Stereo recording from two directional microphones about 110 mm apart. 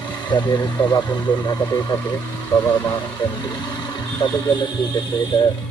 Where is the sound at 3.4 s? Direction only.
40° left (ahead or behind).